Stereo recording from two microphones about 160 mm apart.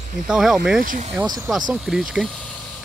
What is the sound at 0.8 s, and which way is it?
Speech, 55° right (ahead or behind).